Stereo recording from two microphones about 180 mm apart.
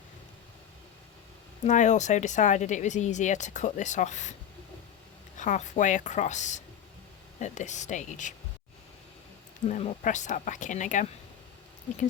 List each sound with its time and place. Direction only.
1.6 s speech: 40° left (ahead or behind)
5.4 s speech: 45° left (ahead or behind)
9.6 s speech: 40° left (ahead or behind)